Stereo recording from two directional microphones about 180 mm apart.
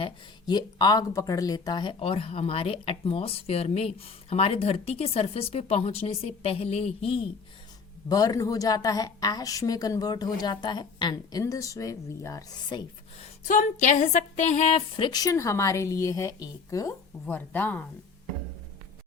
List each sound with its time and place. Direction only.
0.0 s speech: 25° left (ahead or behind)
8.1 s a woman's voice: 20° left (ahead or behind)
13.4 s a woman's voice: 45° left (ahead or behind); by 16.9 s 20° left (ahead or behind)
17.2 s speech: 10° left (ahead or behind)